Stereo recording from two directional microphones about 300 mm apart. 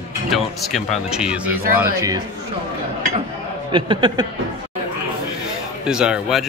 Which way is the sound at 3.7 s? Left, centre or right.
Centre.